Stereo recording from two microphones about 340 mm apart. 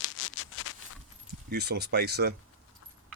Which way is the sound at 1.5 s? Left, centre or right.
Right.